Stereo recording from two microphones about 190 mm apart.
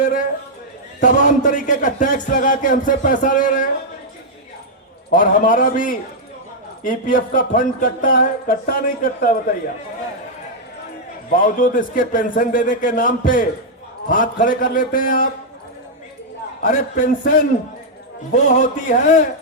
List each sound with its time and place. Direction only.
0.0 s a sound: 40° left (ahead or behind)
1.0 s speech: 40° left (ahead or behind)
5.1 s speech: 45° left (ahead or behind)
11.3 s speech: 45° left (ahead or behind)
16.6 s speech: 40° left (ahead or behind)
18.4 s speech: 40° left (ahead or behind)